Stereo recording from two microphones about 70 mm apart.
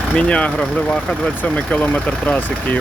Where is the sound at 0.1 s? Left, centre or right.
Centre.